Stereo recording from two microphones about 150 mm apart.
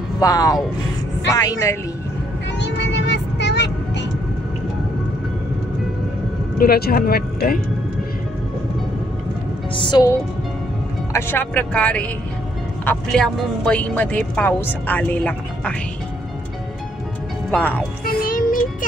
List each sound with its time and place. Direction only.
0.2 s a woman's voice: 25° left (ahead or behind)
6.6 s speech: 85° left
9.8 s a woman's voice: 30° left (ahead or behind)
11.1 s speech: 15° left (ahead or behind)
17.5 s speech: 10° left (ahead or behind)
18.0 s music: 70° left (ahead or behind)